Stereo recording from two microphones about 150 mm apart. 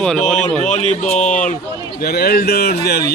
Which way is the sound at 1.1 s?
55° left (ahead or behind).